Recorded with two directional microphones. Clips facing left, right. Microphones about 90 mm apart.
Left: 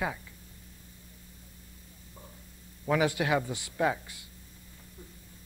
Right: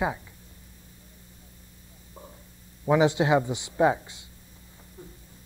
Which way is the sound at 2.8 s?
20° right (ahead or behind).